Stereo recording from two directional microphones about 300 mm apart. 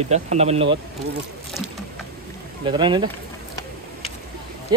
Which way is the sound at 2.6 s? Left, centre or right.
Centre.